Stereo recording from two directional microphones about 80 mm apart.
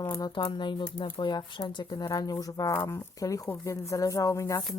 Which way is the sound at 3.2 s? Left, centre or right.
Left.